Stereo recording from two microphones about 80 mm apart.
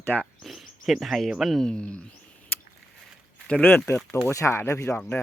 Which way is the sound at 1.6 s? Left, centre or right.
Centre.